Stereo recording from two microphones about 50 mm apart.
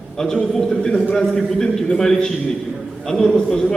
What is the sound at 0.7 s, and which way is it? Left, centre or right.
Speech, left.